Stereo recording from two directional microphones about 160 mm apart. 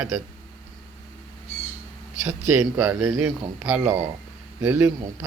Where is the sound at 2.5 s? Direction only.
10° right (ahead or behind).